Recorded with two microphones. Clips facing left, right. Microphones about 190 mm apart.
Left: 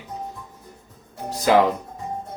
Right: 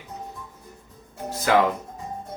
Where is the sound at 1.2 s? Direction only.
15° left (ahead or behind).